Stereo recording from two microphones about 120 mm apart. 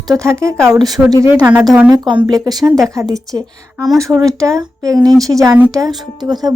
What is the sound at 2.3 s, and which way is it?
A woman's voice, 30° right (ahead or behind).